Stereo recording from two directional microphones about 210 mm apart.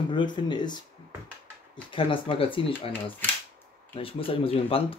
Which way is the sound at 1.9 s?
25° left (ahead or behind).